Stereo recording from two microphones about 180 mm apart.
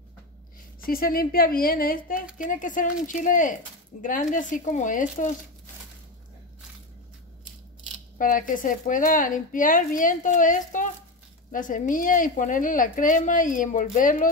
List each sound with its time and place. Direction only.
0.8 s a woman's voice: 55° left (ahead or behind)
8.2 s a woman's voice: 50° left (ahead or behind)